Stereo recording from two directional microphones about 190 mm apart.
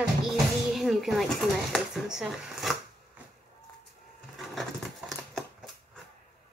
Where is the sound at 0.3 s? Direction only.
Centre (ahead or behind).